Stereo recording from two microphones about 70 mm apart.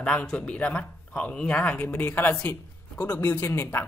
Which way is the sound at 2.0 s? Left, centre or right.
Left.